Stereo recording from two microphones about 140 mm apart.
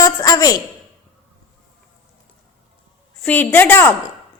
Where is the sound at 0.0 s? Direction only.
25° left (ahead or behind).